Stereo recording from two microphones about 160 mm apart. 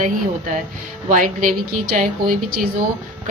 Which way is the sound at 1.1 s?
55° right (ahead or behind).